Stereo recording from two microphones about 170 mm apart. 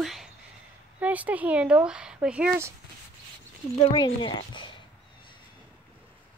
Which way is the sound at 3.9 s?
30° left (ahead or behind).